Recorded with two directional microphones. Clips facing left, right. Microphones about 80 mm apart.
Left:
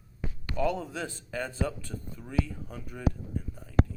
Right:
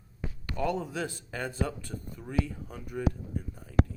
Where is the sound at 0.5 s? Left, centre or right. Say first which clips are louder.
Left 1 dB; centre.